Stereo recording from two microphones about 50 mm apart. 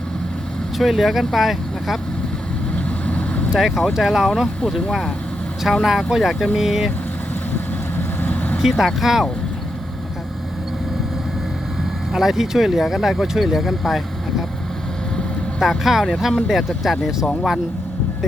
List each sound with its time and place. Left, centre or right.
0.8 s speech: centre
3.1 s vehicle: left
3.9 s speech: centre
7.5 s vehicle: left
8.5 s speech: centre
12.1 s speech: centre
15.5 s speech: centre